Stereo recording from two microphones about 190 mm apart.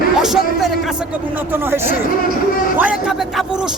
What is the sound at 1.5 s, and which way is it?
A man's voice, 10° right (ahead or behind).